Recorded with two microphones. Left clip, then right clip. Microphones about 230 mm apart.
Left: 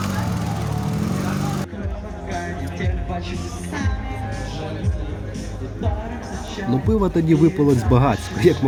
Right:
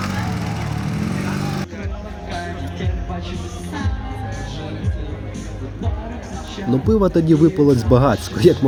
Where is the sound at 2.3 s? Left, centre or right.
Left.